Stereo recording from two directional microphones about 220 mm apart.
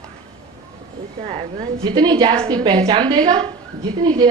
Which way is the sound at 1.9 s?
20° right (ahead or behind).